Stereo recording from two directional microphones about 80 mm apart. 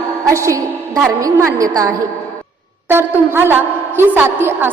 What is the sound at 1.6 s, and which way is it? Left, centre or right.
Speech, right.